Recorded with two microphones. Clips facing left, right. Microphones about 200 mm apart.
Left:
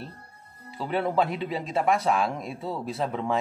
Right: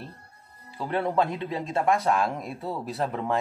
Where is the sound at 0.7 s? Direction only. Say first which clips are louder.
Even; centre (ahead or behind).